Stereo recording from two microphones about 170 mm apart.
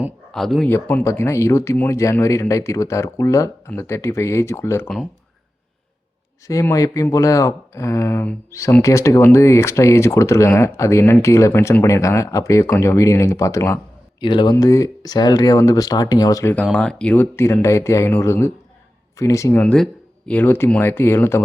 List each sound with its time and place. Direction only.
0.3 s speech: centre (ahead or behind)
6.5 s speech: 20° left (ahead or behind)
14.2 s speech: 25° left (ahead or behind)
19.6 s speech: 5° left (ahead or behind)